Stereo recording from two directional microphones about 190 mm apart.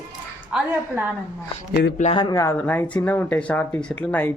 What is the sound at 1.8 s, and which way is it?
Speech, 65° left (ahead or behind).